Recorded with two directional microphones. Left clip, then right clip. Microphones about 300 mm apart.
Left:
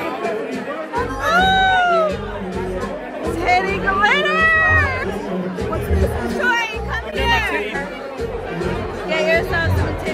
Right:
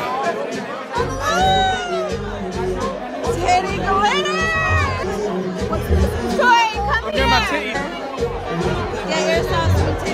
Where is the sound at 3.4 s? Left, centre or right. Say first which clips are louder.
Left 1 dB; centre.